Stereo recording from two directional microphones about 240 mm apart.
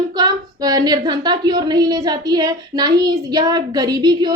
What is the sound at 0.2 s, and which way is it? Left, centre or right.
A woman's voice, centre.